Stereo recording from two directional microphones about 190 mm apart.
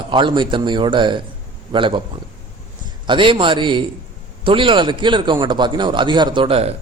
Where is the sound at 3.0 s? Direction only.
25° right (ahead or behind).